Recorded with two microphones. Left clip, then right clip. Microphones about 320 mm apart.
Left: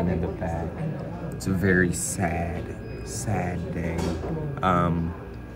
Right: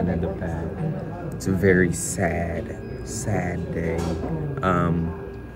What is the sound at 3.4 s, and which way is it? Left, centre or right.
Speech, centre.